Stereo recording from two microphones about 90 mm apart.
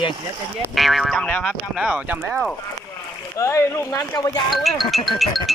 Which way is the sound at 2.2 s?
Centre (ahead or behind).